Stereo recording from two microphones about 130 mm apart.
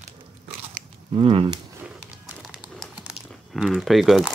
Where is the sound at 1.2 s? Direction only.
45° right (ahead or behind).